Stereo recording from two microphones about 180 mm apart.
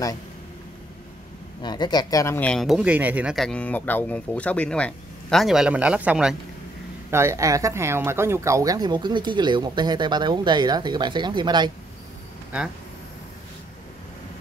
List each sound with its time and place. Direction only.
1.6 s speech: 25° left (ahead or behind); by 11.7 s 25° right (ahead or behind)